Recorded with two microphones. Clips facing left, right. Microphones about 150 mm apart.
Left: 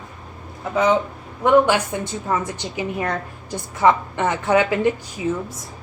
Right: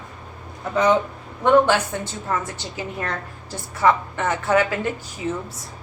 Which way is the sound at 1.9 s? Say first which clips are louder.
Left 3 dB; 15° left (ahead or behind).